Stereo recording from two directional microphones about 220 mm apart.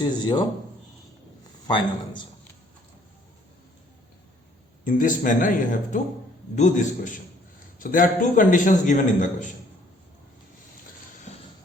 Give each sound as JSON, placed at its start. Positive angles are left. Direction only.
{"t": 0.0, "sound": "a man's voice", "side_deg": 20}
{"t": 1.6, "sound": "a man's voice", "side_deg": 20}
{"t": 4.9, "sound": "a man's voice", "side_deg": 35}